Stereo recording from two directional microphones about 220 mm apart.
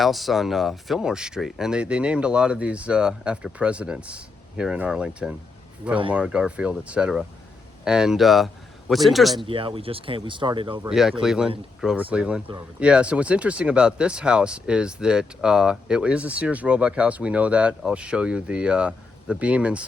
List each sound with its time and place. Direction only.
0.0 s speech: centre (ahead or behind)
9.3 s speech: 25° right (ahead or behind)
10.8 s speech: centre (ahead or behind)